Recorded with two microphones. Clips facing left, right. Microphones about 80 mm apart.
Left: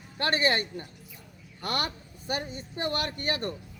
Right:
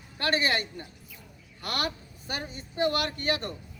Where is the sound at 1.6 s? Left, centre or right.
Left.